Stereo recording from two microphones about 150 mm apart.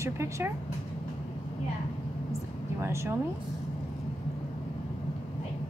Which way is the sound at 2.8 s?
20° right (ahead or behind).